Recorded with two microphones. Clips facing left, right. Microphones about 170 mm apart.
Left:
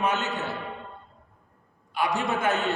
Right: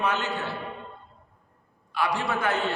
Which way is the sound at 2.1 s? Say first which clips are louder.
Left 2 dB; 20° left (ahead or behind).